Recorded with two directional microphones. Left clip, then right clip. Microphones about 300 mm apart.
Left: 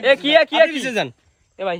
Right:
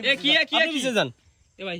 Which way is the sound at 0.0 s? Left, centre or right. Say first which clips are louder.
Left 7 dB; centre.